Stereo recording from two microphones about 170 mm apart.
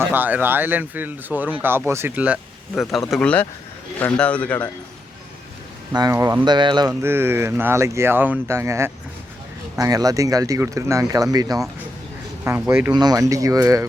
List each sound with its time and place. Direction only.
0.1 s speech: 10° right (ahead or behind)
3.1 s a man's voice: 5° left (ahead or behind)
5.9 s speech: 20° right (ahead or behind)
7.0 s speech: 15° right (ahead or behind)